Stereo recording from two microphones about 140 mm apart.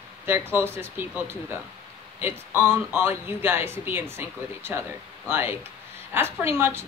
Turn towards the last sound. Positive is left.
turn(degrees=-15)  # may be behind; listen again after turning